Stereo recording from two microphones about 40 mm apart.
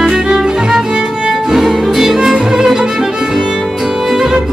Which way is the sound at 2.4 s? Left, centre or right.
Right.